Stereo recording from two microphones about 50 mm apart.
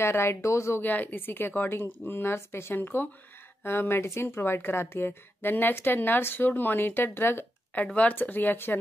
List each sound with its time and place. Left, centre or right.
0.0 s speech: left
0.7 s speech: left
5.4 s speech: left
7.7 s speech: left
8.1 s speech: left